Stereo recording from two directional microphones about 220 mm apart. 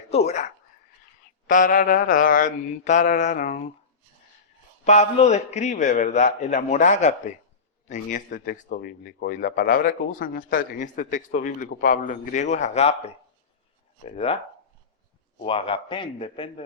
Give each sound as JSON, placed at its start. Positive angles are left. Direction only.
{"t": 0.1, "sound": "speech", "side_deg": 30}
{"t": 4.9, "sound": "speech", "side_deg": 30}
{"t": 15.4, "sound": "a man's voice", "side_deg": 25}